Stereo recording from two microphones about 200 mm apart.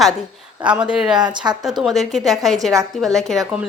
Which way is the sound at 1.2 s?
20° right (ahead or behind).